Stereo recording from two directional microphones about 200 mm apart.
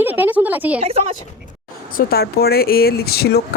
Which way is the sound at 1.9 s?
45° left (ahead or behind).